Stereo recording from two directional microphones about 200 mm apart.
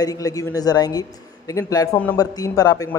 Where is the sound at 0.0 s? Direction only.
15° left (ahead or behind).